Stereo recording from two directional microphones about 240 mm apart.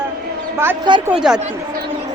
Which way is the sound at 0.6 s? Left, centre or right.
Centre.